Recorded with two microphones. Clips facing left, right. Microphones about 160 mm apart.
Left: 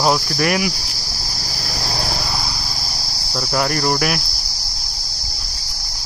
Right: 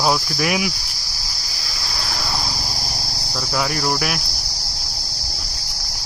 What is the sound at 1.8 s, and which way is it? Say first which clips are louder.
Insect: left 6 dB; 45° left (ahead or behind).